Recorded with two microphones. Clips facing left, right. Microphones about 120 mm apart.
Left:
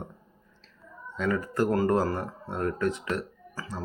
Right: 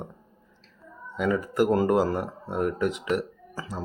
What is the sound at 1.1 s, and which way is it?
Speech, 15° right (ahead or behind).